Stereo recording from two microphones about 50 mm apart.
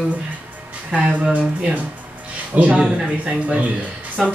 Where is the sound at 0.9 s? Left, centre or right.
Right.